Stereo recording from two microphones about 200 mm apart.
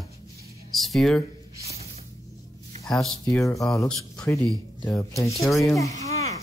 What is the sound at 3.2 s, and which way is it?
Speech, 15° left (ahead or behind).